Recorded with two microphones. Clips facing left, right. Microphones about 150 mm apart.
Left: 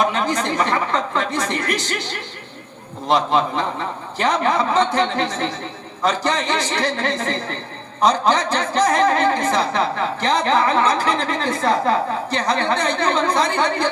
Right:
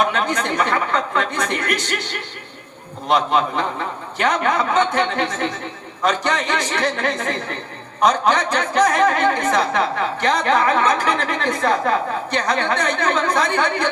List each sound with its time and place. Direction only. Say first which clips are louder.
0.1 s a woman's voice: even; 30° left (ahead or behind)
3.1 s a woman's voice: even; 30° left (ahead or behind)